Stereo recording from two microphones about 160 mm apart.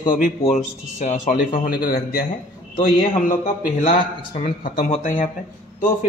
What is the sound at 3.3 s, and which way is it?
A man's voice, 55° left (ahead or behind).